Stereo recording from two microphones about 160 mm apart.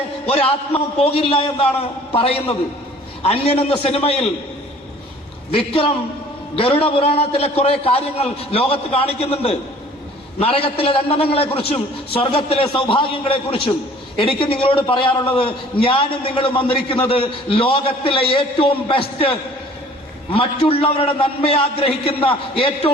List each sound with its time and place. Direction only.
0.3 s a man's voice: 35° left (ahead or behind)
5.5 s a man's voice: 35° left (ahead or behind)
20.3 s a man's voice: 35° left (ahead or behind)